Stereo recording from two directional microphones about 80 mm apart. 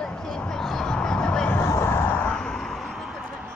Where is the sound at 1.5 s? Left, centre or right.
Left.